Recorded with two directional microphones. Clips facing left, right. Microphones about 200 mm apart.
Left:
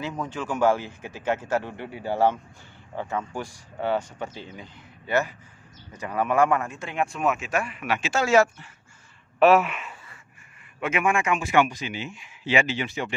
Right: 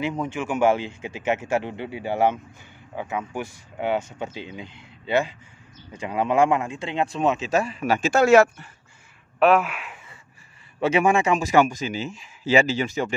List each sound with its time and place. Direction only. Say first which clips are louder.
0.2 s a man's voice: right 1 dB; 20° right (ahead or behind); by 8.6 s 60° right (ahead or behind)
9.4 s speech: left 1 dB; centre (ahead or behind)
10.8 s a man's voice: right 5 dB; 35° right (ahead or behind)